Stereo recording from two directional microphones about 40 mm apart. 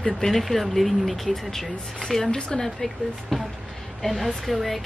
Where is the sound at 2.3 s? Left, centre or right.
Left.